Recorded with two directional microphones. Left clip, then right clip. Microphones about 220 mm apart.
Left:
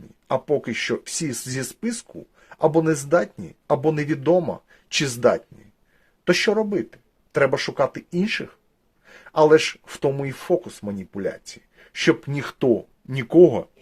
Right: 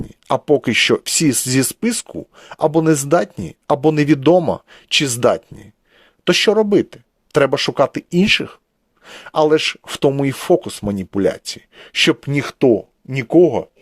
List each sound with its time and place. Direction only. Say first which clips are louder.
0.3 s speech: right 7 dB; 40° right (ahead or behind); by 13.7 s 20° right (ahead or behind)